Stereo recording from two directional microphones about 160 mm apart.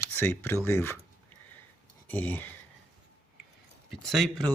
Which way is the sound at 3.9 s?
Centre (ahead or behind).